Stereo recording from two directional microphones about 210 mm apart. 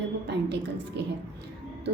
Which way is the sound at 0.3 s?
55° right (ahead or behind).